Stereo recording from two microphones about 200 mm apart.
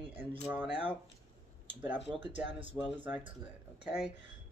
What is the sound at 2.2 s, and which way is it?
Speech, 65° left (ahead or behind).